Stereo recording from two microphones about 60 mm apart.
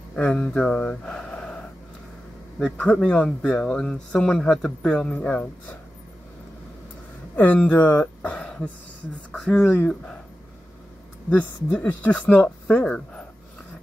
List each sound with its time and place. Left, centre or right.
0.3 s speech: centre
2.8 s speech: left
7.3 s speech: left
8.4 s throat clearing: centre
9.3 s speech: centre
11.8 s speech: left